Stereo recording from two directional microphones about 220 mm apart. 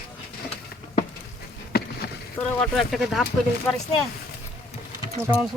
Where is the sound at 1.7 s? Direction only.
45° left (ahead or behind).